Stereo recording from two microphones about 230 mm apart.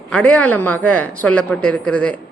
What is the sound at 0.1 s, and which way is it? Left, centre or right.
A woman's voice, centre.